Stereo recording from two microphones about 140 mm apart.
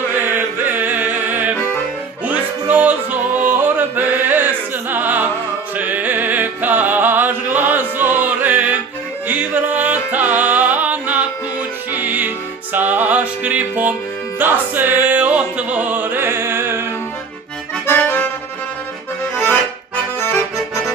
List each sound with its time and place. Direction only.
0.1 s music: 15° right (ahead or behind)
17.8 s accordion: 15° left (ahead or behind)
20.1 s accordion: 15° left (ahead or behind)